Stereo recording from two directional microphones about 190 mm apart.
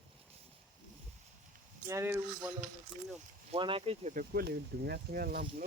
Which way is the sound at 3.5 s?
30° right (ahead or behind).